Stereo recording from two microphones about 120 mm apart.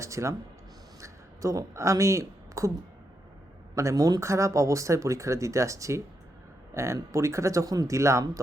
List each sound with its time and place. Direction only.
0.0 s a woman's voice: 25° right (ahead or behind)
3.8 s speech: 30° right (ahead or behind)